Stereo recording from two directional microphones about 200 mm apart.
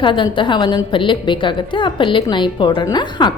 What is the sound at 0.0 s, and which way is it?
A woman's voice, 25° left (ahead or behind).